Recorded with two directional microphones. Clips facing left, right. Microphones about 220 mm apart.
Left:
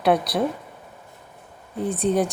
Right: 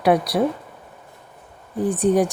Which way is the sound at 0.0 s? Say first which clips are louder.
Right 2 dB; 10° right (ahead or behind).